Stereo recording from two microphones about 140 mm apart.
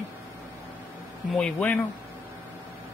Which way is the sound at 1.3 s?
5° left (ahead or behind).